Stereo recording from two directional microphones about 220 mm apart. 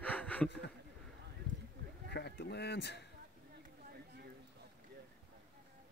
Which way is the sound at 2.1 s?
50° left (ahead or behind).